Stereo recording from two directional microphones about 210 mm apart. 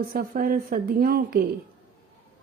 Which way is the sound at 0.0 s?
45° right (ahead or behind).